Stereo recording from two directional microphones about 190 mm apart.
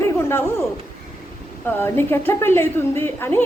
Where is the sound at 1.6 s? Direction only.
10° left (ahead or behind).